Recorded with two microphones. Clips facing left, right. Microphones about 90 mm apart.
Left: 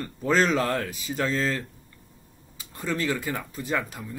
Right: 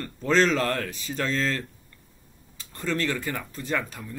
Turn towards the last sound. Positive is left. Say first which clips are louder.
# left 1 dB
turn(degrees=10)  # may be behind; listen again after turning